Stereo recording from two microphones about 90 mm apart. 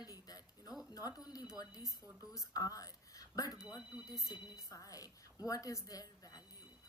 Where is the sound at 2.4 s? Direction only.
40° left (ahead or behind).